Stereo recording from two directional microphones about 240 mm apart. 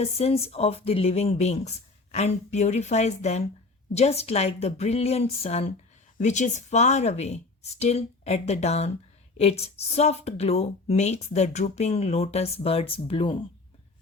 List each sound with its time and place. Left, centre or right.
0.0 s a woman's voice: left